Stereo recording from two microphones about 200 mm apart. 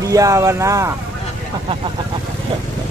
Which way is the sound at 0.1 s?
15° right (ahead or behind).